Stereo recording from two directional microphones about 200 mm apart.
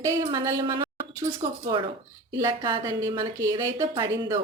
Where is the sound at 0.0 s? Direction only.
15° right (ahead or behind).